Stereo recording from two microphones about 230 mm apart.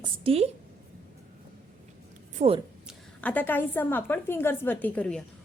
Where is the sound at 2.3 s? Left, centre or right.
Right.